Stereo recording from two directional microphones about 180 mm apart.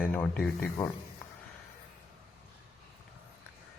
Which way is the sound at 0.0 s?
10° left (ahead or behind).